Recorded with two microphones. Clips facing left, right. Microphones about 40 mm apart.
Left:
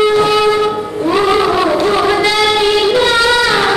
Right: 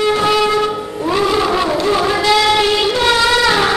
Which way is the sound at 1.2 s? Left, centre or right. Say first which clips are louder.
Left 3 dB; left.